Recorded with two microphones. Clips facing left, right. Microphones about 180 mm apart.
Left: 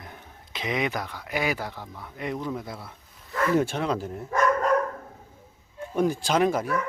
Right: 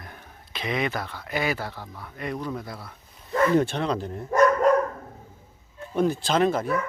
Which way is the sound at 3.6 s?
10° left (ahead or behind).